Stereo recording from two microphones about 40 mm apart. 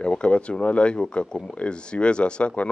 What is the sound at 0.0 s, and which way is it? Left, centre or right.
Speech, left.